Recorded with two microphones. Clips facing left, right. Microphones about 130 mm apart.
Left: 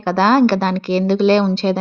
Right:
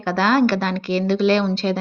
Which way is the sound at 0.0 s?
30° left (ahead or behind).